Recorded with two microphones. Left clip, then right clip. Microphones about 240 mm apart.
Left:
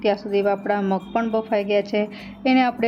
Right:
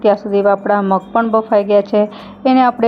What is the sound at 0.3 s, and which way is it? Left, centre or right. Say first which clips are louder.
A woman's voice: right 8 dB; centre.